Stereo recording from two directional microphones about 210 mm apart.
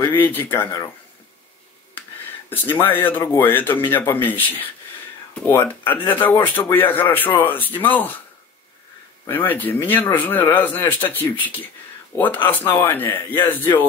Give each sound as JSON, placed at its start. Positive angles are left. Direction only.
{"t": 0.0, "sound": "speech", "side_deg": 10}
{"t": 2.5, "sound": "speech", "side_deg": 10}
{"t": 9.2, "sound": "speech", "side_deg": 10}